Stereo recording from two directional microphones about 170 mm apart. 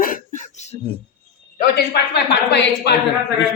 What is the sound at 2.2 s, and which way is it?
Speech, 80° left.